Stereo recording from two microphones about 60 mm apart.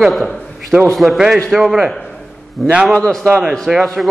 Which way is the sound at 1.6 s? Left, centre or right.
Centre.